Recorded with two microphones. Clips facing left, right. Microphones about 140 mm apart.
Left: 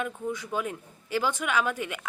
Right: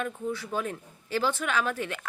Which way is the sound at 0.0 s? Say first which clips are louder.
Even; 15° left (ahead or behind).